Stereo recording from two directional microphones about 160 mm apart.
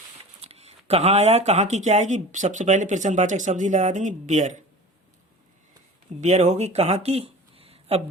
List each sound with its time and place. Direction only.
0.4 s speech: 40° right (ahead or behind)
6.1 s speech: 50° right (ahead or behind)